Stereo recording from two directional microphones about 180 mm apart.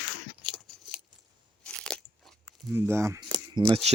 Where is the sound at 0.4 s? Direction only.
Centre (ahead or behind).